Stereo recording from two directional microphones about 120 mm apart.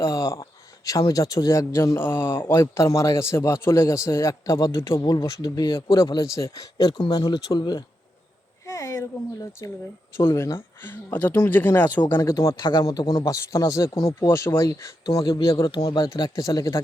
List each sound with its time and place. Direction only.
0.0 s speech: 30° left (ahead or behind)
6.3 s speech: 30° left (ahead or behind)
8.6 s speech: 25° left (ahead or behind)
13.9 s speech: 50° left (ahead or behind)
14.2 s speech: 20° left (ahead or behind)
15.7 s speech: 40° left (ahead or behind)